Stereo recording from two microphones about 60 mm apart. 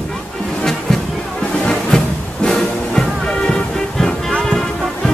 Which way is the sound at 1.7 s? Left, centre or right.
Centre.